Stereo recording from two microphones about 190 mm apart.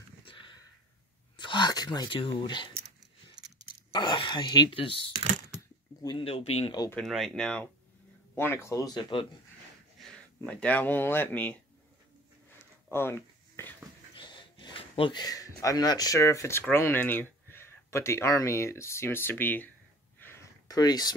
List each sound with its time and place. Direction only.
0.3 s a sound: 25° left (ahead or behind)
1.4 s speech: 25° left (ahead or behind)
3.9 s speech: 25° left (ahead or behind)
6.0 s speech: 30° left (ahead or behind)
6.7 s speech: 20° left (ahead or behind)
7.0 s speech: centre (ahead or behind); by 9.3 s 25° left (ahead or behind)
9.9 s speech: 5° left (ahead or behind)
12.4 s a sound: 10° left (ahead or behind)
14.1 s speech: 25° left (ahead or behind); by 19.7 s 10° left (ahead or behind)
20.2 s a sound: 10° left (ahead or behind)